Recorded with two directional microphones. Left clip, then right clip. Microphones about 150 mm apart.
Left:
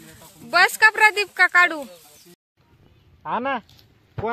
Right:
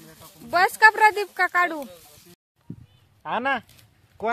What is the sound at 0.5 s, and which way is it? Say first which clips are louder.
Speech: left 1 dB; 20° right (ahead or behind).